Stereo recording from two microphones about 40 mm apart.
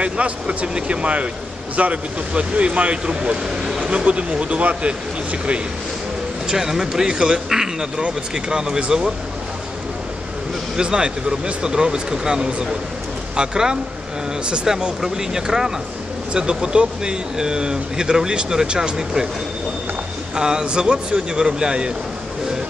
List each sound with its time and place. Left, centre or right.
0.0 s speech: right
3.4 s speech: centre
3.8 s speech: right
6.4 s speech: centre
10.8 s speech: right
14.7 s speech: centre
20.3 s speech: centre